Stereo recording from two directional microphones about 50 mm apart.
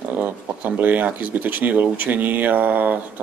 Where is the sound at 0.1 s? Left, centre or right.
Right.